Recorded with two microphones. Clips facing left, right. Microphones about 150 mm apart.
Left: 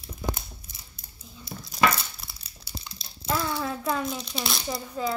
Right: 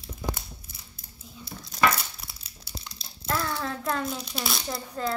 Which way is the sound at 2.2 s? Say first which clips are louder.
Even; centre (ahead or behind).